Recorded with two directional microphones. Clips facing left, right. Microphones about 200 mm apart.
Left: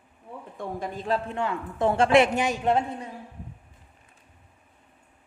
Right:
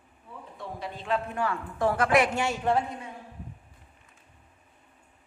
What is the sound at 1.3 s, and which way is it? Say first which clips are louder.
A woman's voice: left 1 dB; 20° left (ahead or behind).